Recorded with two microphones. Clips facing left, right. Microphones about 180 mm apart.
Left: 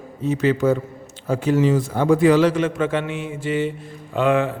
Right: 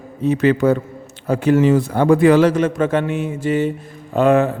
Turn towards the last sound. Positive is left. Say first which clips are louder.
# right 5 dB
turn(degrees=-45)  # may be behind; listen again after turning